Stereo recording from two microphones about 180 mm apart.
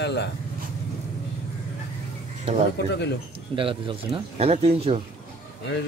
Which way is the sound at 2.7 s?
70° left (ahead or behind).